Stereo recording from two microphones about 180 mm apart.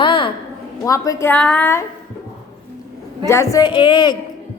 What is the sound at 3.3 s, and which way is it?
Speech, 15° left (ahead or behind).